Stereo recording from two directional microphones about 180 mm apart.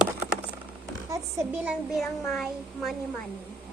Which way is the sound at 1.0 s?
20° right (ahead or behind).